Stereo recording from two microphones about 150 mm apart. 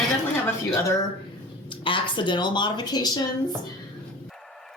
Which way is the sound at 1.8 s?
35° left (ahead or behind).